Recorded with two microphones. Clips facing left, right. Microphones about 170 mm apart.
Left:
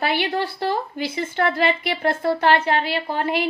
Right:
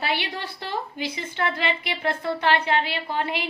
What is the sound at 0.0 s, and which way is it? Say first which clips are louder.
A woman's voice: left 6 dB; 45° left (ahead or behind).